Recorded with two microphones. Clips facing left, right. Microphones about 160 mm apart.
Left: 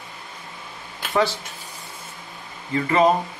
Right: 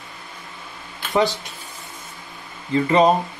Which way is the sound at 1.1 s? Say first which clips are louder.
Right 2 dB; 20° right (ahead or behind).